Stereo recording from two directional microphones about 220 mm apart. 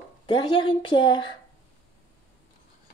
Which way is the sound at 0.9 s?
20° left (ahead or behind).